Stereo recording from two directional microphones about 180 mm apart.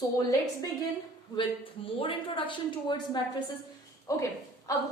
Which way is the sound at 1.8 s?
30° left (ahead or behind).